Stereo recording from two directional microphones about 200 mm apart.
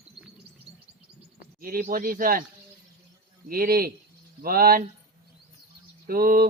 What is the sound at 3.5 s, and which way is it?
Speech, 45° right (ahead or behind).